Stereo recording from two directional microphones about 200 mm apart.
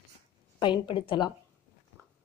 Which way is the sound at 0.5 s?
20° left (ahead or behind).